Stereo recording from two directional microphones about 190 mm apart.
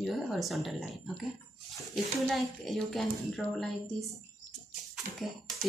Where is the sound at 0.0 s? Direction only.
Centre (ahead or behind).